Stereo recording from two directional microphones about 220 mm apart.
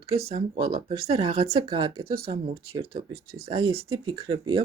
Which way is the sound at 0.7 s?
25° right (ahead or behind).